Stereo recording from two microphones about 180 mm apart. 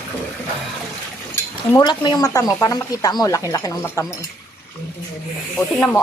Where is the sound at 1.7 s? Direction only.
25° left (ahead or behind).